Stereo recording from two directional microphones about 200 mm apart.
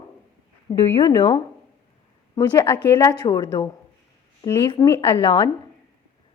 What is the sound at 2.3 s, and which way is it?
A woman's voice, 10° left (ahead or behind).